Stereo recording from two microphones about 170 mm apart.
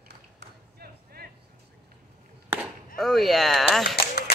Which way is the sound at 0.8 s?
65° right (ahead or behind).